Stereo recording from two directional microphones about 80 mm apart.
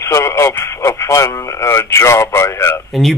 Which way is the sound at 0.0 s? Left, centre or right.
Left.